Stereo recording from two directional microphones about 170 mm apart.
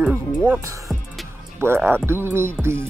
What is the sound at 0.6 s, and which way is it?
Speech, 20° right (ahead or behind).